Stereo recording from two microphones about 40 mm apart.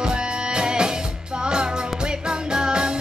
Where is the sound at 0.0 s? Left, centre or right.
Right.